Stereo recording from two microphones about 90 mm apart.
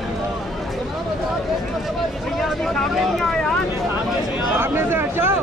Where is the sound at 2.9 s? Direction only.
5° left (ahead or behind).